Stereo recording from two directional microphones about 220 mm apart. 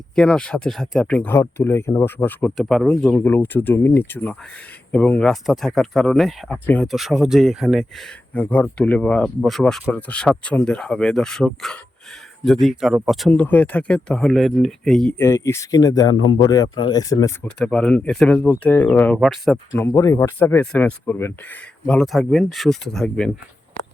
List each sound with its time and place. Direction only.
0.2 s speech: 5° left (ahead or behind)
15.3 s speech: 15° left (ahead or behind)
19.8 s speech: 15° left (ahead or behind)